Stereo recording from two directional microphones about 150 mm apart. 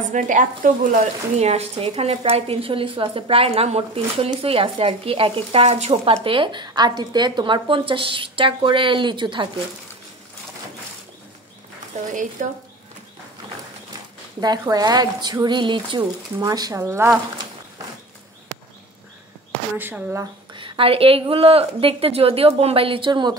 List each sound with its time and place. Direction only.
0.1 s a woman's voice: 60° right (ahead or behind); by 9.5 s 30° right (ahead or behind)
12.1 s speech: 55° right (ahead or behind)
14.4 s speech: 25° right (ahead or behind)
19.8 s speech: 15° right (ahead or behind)
20.5 s a woman's voice: 35° right (ahead or behind)